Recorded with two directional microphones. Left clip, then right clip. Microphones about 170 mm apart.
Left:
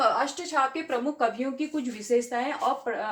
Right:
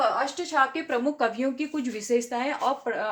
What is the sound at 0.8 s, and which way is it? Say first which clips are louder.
Speech: right 1 dB; 65° right (ahead or behind).